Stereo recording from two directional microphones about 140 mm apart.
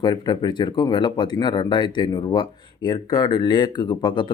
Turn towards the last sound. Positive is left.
turn(degrees=35)  # may be behind; listen again after turning